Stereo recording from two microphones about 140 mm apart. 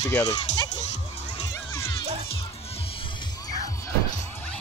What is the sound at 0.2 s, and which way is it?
Speech, 50° left (ahead or behind).